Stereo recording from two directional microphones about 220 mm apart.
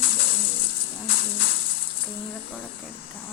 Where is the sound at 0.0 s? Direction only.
40° left (ahead or behind).